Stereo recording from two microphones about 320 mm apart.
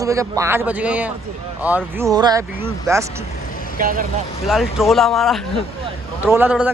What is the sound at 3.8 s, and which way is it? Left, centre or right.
Speech, right.